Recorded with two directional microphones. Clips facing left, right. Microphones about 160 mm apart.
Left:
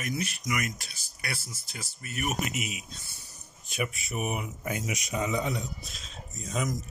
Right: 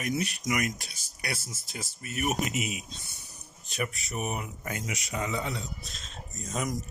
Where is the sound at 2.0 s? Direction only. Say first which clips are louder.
Right 1 dB; 40° left (ahead or behind).